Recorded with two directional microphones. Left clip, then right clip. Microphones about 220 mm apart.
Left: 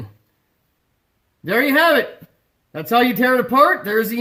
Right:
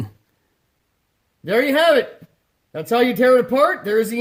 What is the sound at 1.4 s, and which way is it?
Speech, 10° right (ahead or behind).